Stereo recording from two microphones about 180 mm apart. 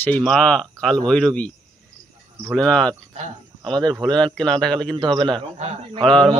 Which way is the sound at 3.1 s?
40° right (ahead or behind).